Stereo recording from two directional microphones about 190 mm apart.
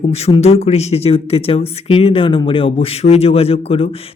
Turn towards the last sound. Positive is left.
turn(degrees=30)  # may be behind; listen again after turning